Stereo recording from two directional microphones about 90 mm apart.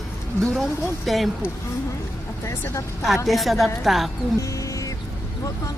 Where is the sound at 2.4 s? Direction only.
30° left (ahead or behind).